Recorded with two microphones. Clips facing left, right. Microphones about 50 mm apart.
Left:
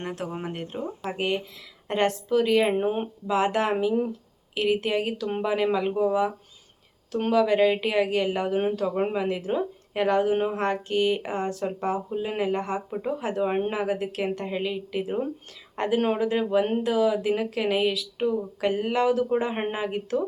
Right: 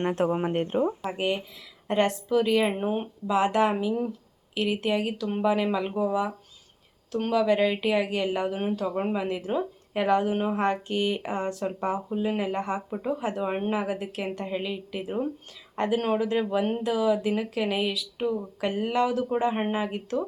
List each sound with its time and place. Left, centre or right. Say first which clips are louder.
0.0 s speech: right 7 dB; right
1.0 s speech: even; centre
2.7 s speech: left 3 dB; centre
3.2 s speech: right 1 dB; centre
3.8 s speech: left 3 dB; centre